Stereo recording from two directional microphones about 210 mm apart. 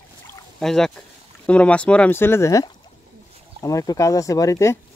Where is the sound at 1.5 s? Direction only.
5° left (ahead or behind).